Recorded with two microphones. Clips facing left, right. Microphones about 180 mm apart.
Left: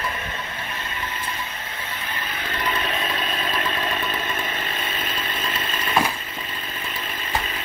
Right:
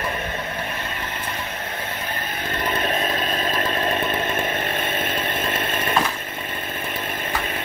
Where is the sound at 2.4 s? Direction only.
45° right (ahead or behind).